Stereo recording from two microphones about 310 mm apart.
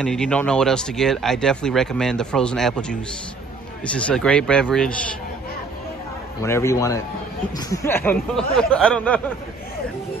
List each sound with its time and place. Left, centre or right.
0.0 s speech: centre
6.4 s speech: centre